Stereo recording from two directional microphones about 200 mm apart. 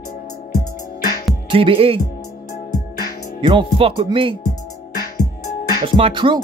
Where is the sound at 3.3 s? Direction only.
25° right (ahead or behind).